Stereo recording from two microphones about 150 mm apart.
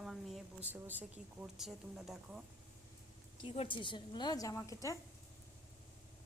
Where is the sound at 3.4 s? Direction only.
35° left (ahead or behind); by 4.9 s 20° left (ahead or behind).